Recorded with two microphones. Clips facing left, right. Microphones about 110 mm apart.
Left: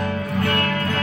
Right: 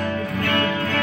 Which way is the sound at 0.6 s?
45° left (ahead or behind).